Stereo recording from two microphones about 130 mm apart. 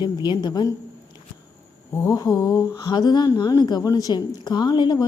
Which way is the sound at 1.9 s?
25° left (ahead or behind).